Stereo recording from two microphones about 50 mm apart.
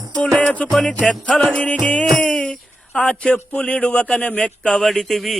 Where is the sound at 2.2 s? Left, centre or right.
Centre.